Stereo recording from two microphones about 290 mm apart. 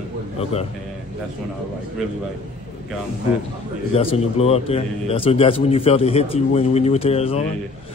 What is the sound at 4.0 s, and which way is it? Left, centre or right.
A man's voice, centre.